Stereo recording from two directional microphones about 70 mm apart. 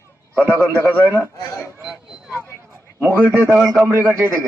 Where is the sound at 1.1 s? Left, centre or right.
Right.